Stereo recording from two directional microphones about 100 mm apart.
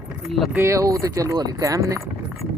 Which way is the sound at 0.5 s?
30° right (ahead or behind).